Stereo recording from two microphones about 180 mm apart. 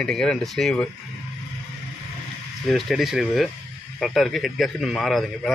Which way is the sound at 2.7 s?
Centre (ahead or behind).